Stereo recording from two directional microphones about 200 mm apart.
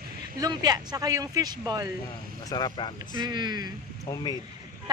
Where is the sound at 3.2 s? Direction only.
20° right (ahead or behind).